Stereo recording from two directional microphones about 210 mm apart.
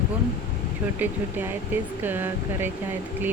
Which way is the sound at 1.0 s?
10° right (ahead or behind).